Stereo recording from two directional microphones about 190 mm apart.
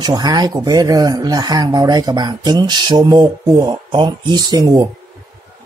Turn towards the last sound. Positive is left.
turn(degrees=-20)  # may be behind; listen again after turning